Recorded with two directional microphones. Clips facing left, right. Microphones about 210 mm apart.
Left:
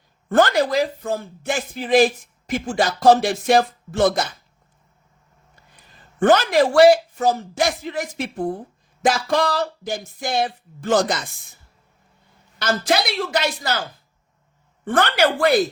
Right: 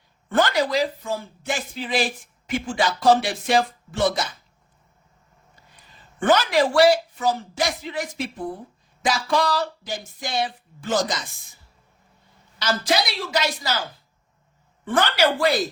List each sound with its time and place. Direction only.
0.3 s speech: 45° left (ahead or behind)
6.1 s speech: 50° left (ahead or behind)
12.5 s a woman's voice: 55° left (ahead or behind)
14.8 s a woman's voice: 55° left (ahead or behind)